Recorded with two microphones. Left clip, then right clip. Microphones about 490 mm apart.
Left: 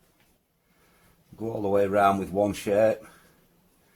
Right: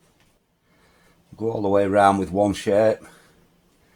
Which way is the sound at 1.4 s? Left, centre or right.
Left.